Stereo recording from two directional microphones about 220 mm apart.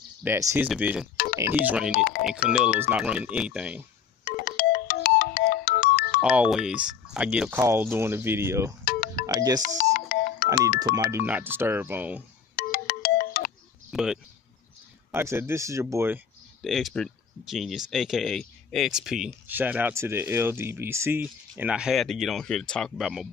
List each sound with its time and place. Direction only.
0.2 s speech: 10° right (ahead or behind)
1.1 s telephone dialing: 40° left (ahead or behind)
1.7 s speech: 5° right (ahead or behind)
4.3 s ringtone: 40° left (ahead or behind)
6.2 s speech: 5° right (ahead or behind)
8.8 s music: 40° left (ahead or behind)
9.2 s speech: 15° right (ahead or behind)
9.6 s music: 40° left (ahead or behind)
10.8 s speech: 10° right (ahead or behind)
12.5 s ringtone: 40° left (ahead or behind)
13.8 s speech: 5° right (ahead or behind)
16.6 s speech: centre (ahead or behind)